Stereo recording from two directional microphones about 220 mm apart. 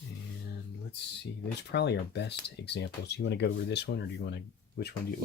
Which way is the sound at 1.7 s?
50° left (ahead or behind).